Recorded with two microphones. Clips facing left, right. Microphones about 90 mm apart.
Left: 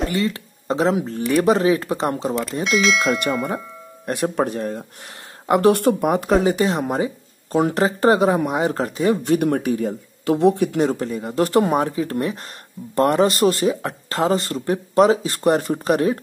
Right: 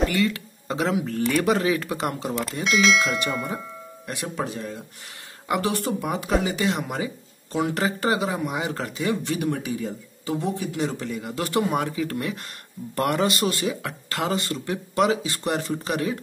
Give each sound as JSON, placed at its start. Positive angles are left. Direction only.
{"t": 0.1, "sound": "speech", "side_deg": 35}
{"t": 2.6, "sound": "bell", "side_deg": 0}
{"t": 4.0, "sound": "speech", "side_deg": 45}